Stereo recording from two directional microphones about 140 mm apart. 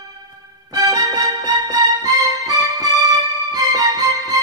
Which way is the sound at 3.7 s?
25° right (ahead or behind).